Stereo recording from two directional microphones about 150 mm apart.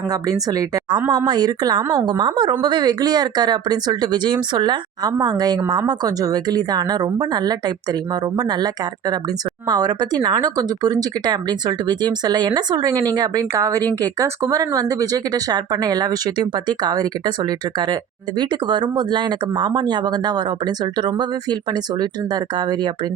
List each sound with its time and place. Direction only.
1.1 s speech: 30° right (ahead or behind)
18.3 s speech: 30° right (ahead or behind)